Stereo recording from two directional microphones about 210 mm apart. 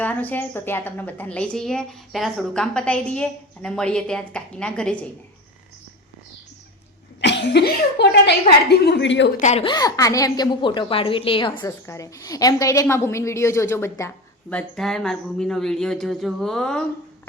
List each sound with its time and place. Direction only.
0.0 s a woman's voice: 10° left (ahead or behind)
7.2 s speech: 55° left (ahead or behind)
9.4 s a woman's voice: 35° left (ahead or behind)
9.6 s a woman's voice: 20° left (ahead or behind)
14.5 s a woman's voice: centre (ahead or behind)